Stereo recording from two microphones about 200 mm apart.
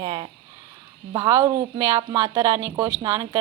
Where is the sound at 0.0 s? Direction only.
25° right (ahead or behind).